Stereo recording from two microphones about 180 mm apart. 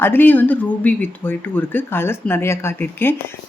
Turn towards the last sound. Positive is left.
turn(degrees=10)  # may be behind; listen again after turning